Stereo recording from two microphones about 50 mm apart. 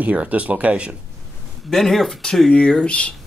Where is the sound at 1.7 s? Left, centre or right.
Centre.